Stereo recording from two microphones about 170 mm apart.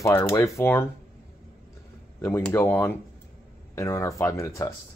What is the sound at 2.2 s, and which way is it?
Speech, 15° left (ahead or behind).